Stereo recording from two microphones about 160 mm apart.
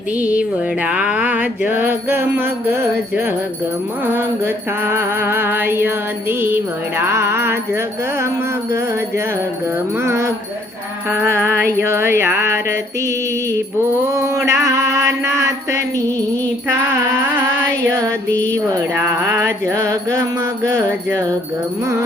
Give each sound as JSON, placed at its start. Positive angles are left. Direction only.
{"t": 0.2, "sound": "music", "side_deg": -10}
{"t": 10.0, "sound": "music", "side_deg": -15}